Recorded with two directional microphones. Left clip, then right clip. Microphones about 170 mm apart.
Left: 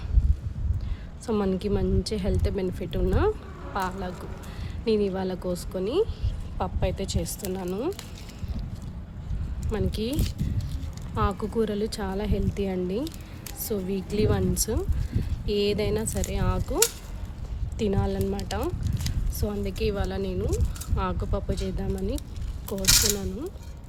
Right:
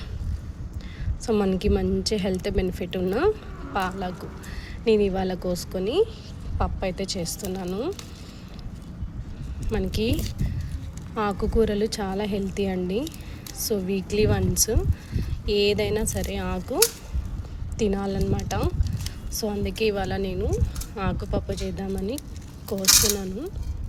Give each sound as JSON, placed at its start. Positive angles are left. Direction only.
{"t": 1.3, "sound": "speech", "side_deg": -5}
{"t": 9.6, "sound": "speech", "side_deg": 0}